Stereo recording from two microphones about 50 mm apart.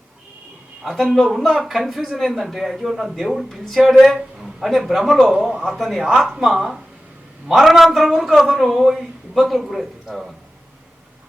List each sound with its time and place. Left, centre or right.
0.8 s a man's voice: centre
5.3 s a man's voice: centre
5.7 s a man's voice: centre